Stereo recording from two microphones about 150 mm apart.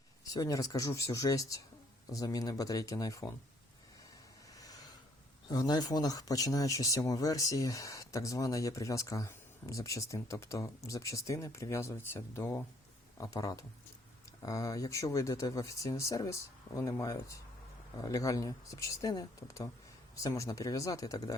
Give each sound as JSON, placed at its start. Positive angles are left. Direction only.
{"t": 0.3, "sound": "speech", "side_deg": 25}
{"t": 4.5, "sound": "a sound", "side_deg": 25}
{"t": 5.5, "sound": "speech", "side_deg": 25}